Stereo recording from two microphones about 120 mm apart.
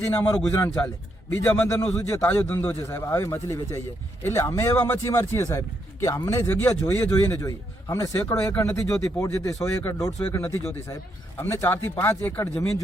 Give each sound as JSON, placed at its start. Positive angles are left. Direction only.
{"t": 0.0, "sound": "a man's voice", "side_deg": 15}
{"t": 1.6, "sound": "a man's voice", "side_deg": 25}